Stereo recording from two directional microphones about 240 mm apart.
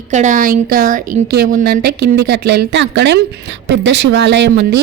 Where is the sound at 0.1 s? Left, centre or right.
Right.